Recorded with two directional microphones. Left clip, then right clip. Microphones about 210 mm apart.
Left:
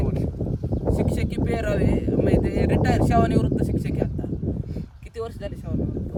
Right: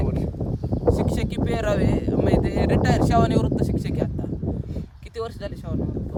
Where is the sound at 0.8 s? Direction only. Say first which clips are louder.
Right 4 dB; centre (ahead or behind).